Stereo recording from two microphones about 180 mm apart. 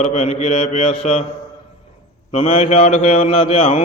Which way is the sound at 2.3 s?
35° left (ahead or behind).